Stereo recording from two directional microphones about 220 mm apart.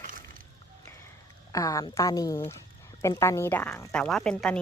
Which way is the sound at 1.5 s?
15° left (ahead or behind).